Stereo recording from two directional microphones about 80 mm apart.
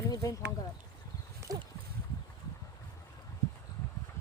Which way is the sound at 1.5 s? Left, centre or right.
Right.